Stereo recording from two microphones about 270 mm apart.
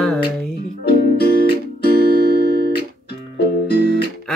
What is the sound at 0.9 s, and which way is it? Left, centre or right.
Music, left.